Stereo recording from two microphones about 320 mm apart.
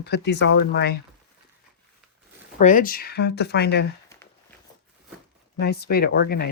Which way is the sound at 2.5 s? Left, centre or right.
Left.